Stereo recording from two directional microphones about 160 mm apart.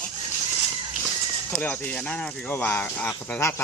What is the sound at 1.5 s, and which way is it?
Speech, 10° left (ahead or behind).